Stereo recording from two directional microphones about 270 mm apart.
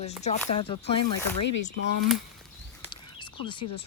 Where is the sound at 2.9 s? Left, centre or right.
Centre.